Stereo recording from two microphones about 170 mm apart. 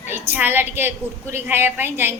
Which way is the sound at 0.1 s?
10° right (ahead or behind).